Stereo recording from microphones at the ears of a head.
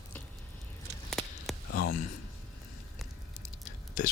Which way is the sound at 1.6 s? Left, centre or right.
Left.